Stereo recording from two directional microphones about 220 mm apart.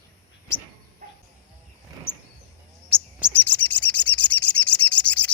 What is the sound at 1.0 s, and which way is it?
Cricket, 40° right (ahead or behind).